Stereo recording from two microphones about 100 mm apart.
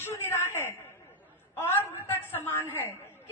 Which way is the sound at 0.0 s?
25° left (ahead or behind).